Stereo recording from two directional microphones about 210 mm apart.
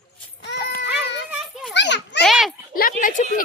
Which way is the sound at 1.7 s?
55° left (ahead or behind).